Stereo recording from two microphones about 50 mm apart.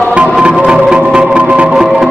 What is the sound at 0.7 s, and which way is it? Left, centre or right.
Music, centre.